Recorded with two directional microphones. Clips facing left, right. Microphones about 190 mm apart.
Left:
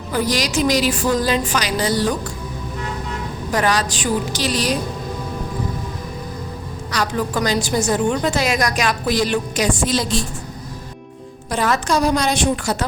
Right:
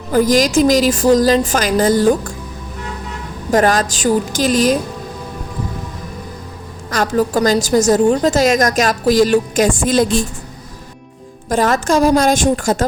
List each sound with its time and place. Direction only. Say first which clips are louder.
0.1 s a woman's voice: right 8 dB; 45° right (ahead or behind)
3.5 s a woman's voice: right 6 dB; 45° right (ahead or behind)
6.9 s a woman's voice: right 6 dB; 45° right (ahead or behind)
11.4 s a woman's voice: right 5 dB; 45° right (ahead or behind)